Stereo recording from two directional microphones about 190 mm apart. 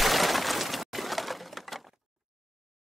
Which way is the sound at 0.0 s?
Centre (ahead or behind).